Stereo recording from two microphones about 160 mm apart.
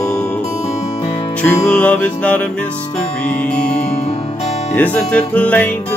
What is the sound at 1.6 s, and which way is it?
Music, 10° left (ahead or behind).